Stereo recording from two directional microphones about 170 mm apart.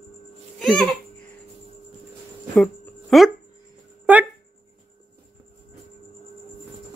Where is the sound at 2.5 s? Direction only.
Centre (ahead or behind).